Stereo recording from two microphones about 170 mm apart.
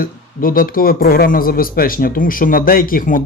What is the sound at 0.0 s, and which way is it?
Speech, 55° left (ahead or behind).